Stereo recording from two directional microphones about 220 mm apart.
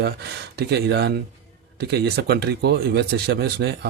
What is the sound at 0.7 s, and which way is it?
Speech, 50° right (ahead or behind).